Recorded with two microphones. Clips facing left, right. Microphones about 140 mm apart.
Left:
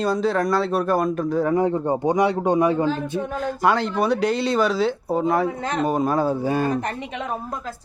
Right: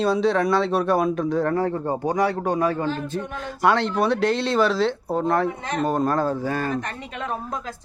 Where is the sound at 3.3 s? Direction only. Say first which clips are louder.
Even; centre (ahead or behind).